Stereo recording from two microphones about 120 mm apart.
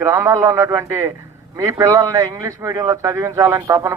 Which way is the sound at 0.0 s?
25° right (ahead or behind).